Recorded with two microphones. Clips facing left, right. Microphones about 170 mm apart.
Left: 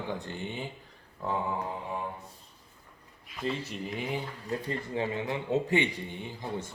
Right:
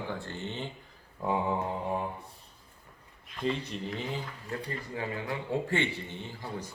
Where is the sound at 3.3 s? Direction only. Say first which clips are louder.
Right 1 dB; 5° left (ahead or behind).